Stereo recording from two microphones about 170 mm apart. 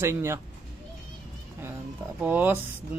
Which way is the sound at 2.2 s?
10° right (ahead or behind).